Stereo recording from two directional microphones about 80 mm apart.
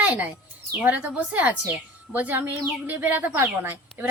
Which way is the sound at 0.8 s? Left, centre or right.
Centre.